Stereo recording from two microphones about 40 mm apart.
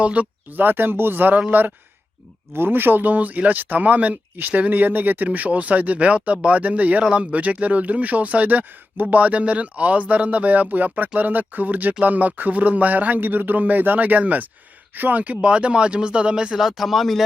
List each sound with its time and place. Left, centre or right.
0.0 s speech: right
0.5 s speech: right
2.5 s speech: right
7.0 s speech: right
15.2 s speech: right
16.6 s speech: centre